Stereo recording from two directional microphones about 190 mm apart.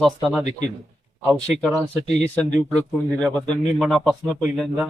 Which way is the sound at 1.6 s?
5° right (ahead or behind).